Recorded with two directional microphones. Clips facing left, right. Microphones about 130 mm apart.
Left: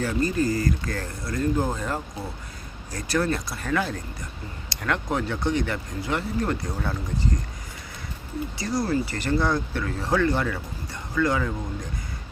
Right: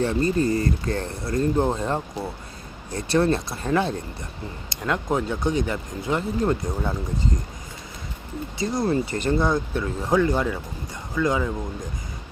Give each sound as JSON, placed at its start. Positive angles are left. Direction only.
{"t": 0.0, "sound": "speech", "side_deg": -30}
{"t": 8.5, "sound": "speech", "side_deg": -20}